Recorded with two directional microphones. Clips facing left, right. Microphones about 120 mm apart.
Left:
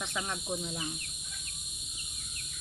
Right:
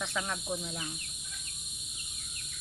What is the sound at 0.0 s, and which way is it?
Speech, 25° left (ahead or behind).